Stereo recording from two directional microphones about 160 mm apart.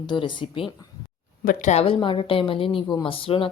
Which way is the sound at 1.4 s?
55° left (ahead or behind).